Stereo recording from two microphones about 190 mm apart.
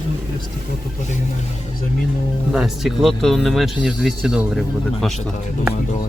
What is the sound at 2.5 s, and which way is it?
Speech, centre (ahead or behind).